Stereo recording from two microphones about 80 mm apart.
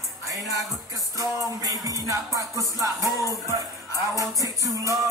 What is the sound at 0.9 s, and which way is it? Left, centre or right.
Music, right.